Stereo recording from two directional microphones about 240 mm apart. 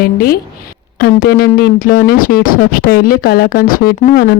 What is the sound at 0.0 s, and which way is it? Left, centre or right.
Speech, left.